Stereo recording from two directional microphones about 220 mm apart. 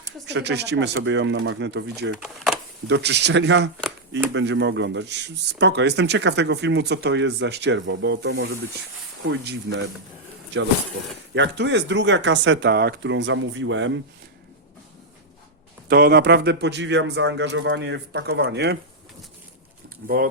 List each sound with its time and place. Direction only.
0.3 s speech: 50° right (ahead or behind)
2.2 s speech: centre (ahead or behind)
2.8 s speech: 50° right (ahead or behind)
11.3 s speech: 55° right (ahead or behind)
15.9 s speech: 45° right (ahead or behind)
20.0 s speech: 45° right (ahead or behind)